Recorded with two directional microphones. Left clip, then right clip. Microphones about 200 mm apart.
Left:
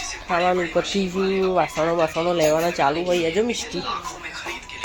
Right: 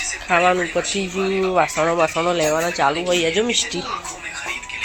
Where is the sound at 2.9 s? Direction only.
5° left (ahead or behind).